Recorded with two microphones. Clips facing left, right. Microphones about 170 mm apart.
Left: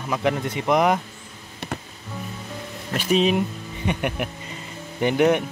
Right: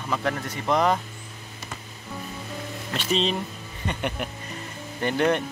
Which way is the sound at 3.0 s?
10° left (ahead or behind).